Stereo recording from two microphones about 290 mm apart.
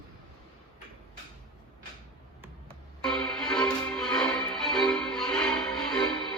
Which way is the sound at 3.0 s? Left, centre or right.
Centre.